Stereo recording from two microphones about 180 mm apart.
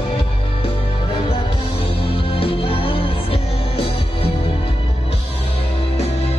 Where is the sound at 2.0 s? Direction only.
30° left (ahead or behind).